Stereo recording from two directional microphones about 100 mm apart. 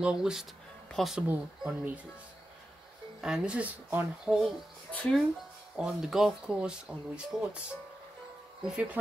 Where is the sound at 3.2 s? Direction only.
5° right (ahead or behind).